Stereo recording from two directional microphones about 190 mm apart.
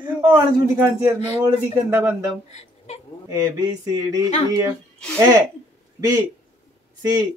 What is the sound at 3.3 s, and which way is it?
Speech, 20° right (ahead or behind).